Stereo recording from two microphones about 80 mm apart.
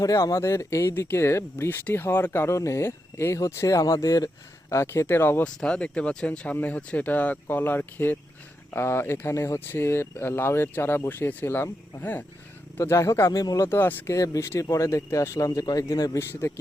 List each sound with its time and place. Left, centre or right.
0.0 s speech: left
0.3 s speech: left
5.5 s speech: centre; by 13.3 s left
13.3 s speech: left
13.7 s speech: left
14.1 s speech: left
16.1 s speech: left